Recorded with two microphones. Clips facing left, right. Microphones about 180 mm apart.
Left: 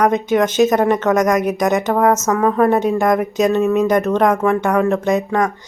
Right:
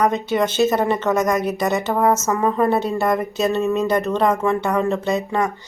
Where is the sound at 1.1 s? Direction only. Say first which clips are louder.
Left 3 dB; 90° left.